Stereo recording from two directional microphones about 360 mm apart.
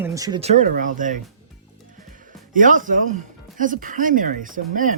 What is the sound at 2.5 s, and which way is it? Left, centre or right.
Speech, right.